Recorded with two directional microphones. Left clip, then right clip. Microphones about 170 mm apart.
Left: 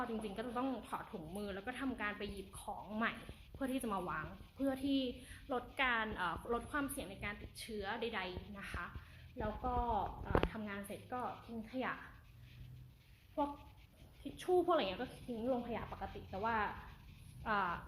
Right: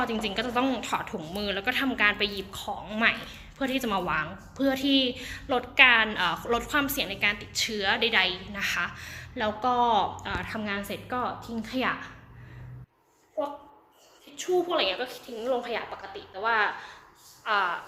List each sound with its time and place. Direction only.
0.0 s a woman's voice: 5° left (ahead or behind)
4.0 s a woman's voice: centre (ahead or behind)
4.5 s a woman's voice: 15° left (ahead or behind)
14.3 s a woman's voice: 20° left (ahead or behind)